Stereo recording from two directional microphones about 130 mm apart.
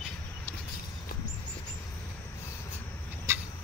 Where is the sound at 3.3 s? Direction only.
25° right (ahead or behind).